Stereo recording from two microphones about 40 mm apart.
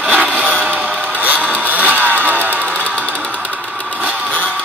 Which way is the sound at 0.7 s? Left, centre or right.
Right.